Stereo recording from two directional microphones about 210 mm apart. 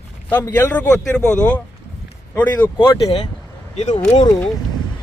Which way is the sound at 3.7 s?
35° left (ahead or behind).